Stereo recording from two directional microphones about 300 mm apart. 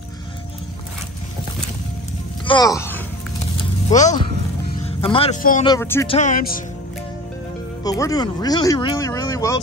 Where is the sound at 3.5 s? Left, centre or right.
Left.